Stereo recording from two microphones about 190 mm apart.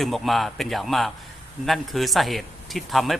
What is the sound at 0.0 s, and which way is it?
Speech, centre (ahead or behind).